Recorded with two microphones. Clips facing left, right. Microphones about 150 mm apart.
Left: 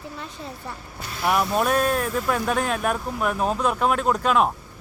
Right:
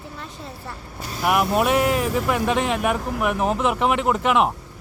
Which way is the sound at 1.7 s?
80° right.